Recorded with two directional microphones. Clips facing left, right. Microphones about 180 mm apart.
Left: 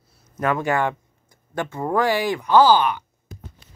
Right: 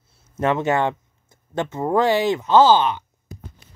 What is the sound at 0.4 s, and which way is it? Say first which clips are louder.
Speech: right 2 dB; 25° right (ahead or behind).